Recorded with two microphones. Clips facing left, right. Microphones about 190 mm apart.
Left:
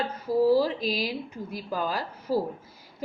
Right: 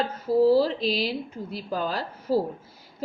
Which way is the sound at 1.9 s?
10° left (ahead or behind).